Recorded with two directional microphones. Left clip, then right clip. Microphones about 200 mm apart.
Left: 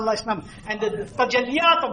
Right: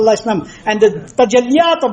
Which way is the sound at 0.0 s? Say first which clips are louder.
Right 11 dB; 40° right (ahead or behind).